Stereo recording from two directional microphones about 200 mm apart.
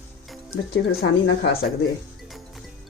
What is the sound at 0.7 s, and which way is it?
Speech, 50° left (ahead or behind).